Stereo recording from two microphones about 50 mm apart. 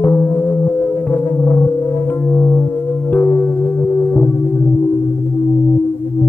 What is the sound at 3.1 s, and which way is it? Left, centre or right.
Music, left.